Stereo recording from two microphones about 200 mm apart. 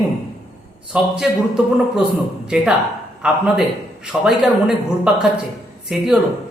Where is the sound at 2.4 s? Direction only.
5° right (ahead or behind).